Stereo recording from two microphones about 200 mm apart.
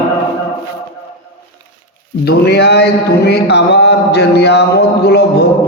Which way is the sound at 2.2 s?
55° left (ahead or behind).